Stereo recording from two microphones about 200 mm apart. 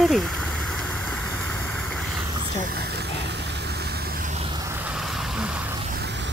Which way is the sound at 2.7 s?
55° right (ahead or behind).